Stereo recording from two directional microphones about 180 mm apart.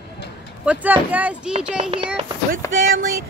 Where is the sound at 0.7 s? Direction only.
10° right (ahead or behind).